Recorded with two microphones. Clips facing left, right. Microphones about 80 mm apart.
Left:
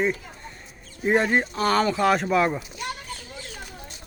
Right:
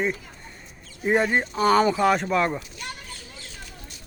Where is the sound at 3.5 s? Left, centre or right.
Left.